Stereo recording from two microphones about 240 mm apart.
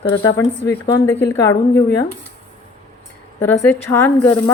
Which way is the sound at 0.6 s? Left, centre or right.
Left.